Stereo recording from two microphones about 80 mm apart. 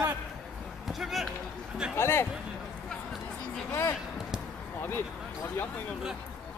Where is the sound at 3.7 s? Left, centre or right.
Left.